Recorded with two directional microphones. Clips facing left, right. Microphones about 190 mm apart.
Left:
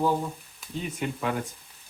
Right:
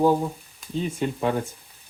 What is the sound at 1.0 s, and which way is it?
Speech, 30° right (ahead or behind).